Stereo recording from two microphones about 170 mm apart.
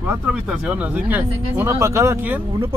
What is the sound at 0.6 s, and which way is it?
Speech, 10° right (ahead or behind).